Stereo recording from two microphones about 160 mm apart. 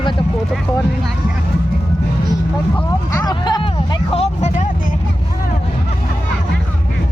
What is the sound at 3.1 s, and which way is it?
Speech, 20° left (ahead or behind).